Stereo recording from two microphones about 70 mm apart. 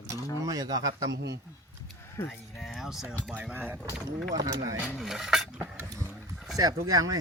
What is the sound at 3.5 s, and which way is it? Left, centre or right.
Speech, right.